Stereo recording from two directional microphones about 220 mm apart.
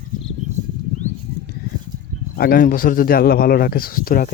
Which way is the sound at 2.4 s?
45° left (ahead or behind).